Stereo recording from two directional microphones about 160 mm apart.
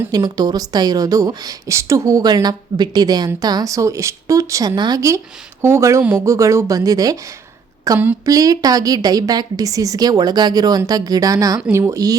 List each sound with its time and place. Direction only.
0.1 s a woman's voice: 25° right (ahead or behind)